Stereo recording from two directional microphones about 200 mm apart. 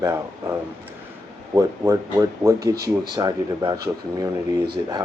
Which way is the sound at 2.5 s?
50° right (ahead or behind).